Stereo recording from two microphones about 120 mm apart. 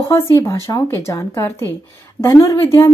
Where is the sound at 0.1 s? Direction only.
20° left (ahead or behind).